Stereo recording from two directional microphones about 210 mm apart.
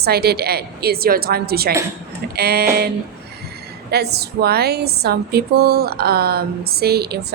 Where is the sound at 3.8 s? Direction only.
50° right (ahead or behind).